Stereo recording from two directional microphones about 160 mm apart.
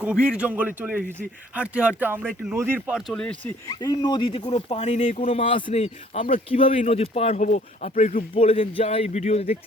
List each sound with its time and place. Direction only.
0.0 s a man's voice: 5° right (ahead or behind)
3.1 s speech: 5° left (ahead or behind)
3.7 s speech: 25° left (ahead or behind)
5.8 s speech: 50° left (ahead or behind)
6.3 s speech: 35° left (ahead or behind)